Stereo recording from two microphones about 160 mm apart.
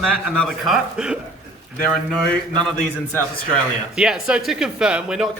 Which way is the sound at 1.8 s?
5° left (ahead or behind).